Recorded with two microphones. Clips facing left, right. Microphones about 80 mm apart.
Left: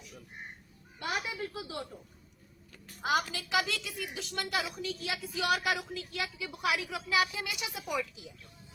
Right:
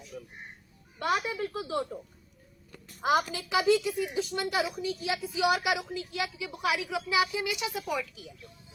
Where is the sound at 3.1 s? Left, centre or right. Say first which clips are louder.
Right 4 dB; right.